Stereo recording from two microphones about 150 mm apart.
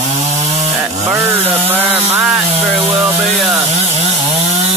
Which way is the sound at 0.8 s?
15° right (ahead or behind).